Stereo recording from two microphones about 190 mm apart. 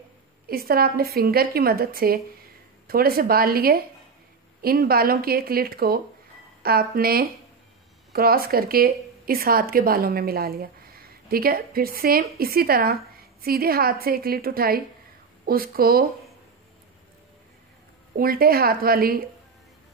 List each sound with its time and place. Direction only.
0.5 s a woman's voice: 50° right (ahead or behind)
18.1 s a woman's voice: 50° right (ahead or behind)